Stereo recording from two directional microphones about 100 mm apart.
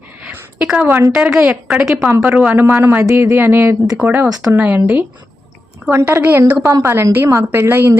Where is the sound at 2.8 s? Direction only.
25° right (ahead or behind).